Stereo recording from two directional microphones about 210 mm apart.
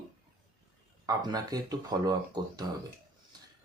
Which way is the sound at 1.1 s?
20° right (ahead or behind).